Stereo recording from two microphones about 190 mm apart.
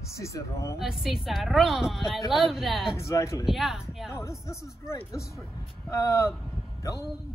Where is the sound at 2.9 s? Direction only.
15° left (ahead or behind).